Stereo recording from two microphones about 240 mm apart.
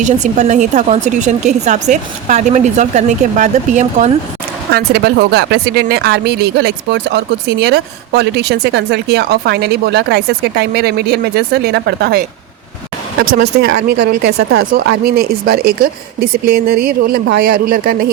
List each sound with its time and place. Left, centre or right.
0.0 s a woman's voice: right
4.7 s speech: right
13.2 s speech: right